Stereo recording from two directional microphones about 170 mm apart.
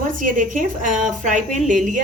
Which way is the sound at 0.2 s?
50° right (ahead or behind).